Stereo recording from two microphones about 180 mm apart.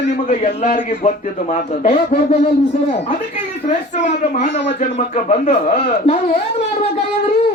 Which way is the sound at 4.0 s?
40° left (ahead or behind).